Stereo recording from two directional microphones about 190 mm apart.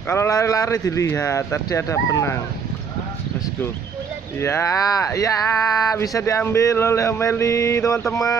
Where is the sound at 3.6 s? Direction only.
10° left (ahead or behind).